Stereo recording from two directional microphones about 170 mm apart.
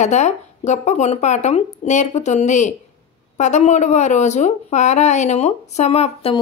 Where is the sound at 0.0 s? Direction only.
45° left (ahead or behind).